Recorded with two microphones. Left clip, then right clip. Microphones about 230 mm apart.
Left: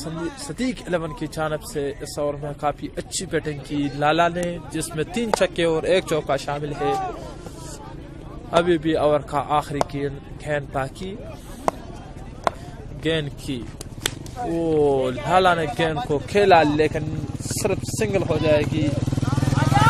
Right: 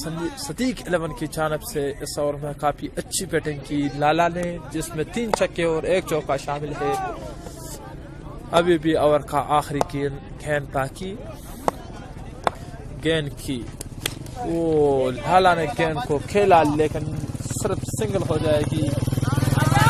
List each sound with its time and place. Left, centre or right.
0.6 s a man's voice: centre
8.5 s a man's voice: centre
11.7 s a sound: centre
13.0 s a man's voice: centre
14.0 s a sound: centre
14.6 s a man's voice: centre
19.0 s vehicle: right